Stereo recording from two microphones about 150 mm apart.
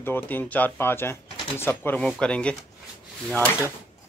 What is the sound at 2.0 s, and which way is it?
Speech, 5° left (ahead or behind).